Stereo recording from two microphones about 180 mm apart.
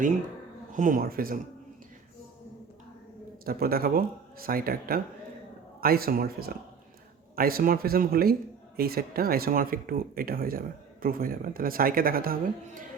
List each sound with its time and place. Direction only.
0.7 s speech: 45° right (ahead or behind)
3.4 s speech: 55° right (ahead or behind)